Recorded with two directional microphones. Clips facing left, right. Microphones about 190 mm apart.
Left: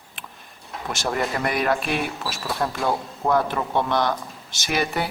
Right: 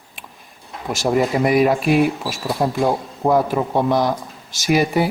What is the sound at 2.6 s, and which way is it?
Speech, 25° right (ahead or behind).